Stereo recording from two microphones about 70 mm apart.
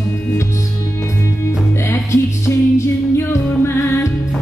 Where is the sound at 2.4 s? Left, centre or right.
Left.